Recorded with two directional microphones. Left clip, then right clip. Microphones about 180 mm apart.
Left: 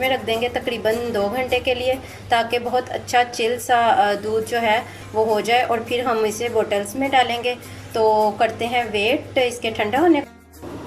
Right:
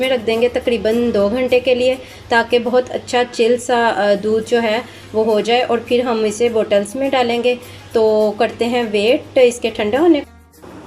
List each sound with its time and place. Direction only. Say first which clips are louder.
0.0 s a woman's voice: right 5 dB; 25° right (ahead or behind)